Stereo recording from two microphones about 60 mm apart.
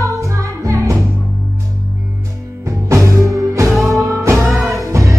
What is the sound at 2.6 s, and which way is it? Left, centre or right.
Music, right.